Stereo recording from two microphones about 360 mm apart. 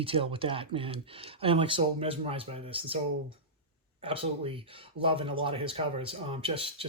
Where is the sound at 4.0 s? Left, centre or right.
Centre.